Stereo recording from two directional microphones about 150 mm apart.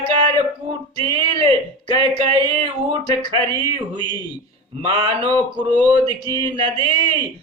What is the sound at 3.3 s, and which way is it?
Speech, 35° right (ahead or behind).